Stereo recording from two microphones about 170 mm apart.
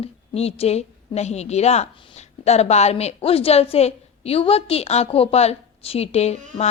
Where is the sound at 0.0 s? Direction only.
35° left (ahead or behind).